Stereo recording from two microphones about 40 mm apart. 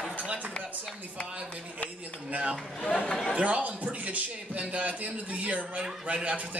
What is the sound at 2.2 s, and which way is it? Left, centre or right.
A man's voice, right.